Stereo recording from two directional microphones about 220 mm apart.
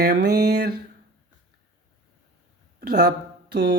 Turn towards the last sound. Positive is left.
turn(degrees=-50)  # may be behind; listen again after turning